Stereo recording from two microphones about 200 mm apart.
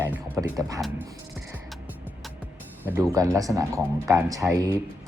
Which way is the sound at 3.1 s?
15° right (ahead or behind).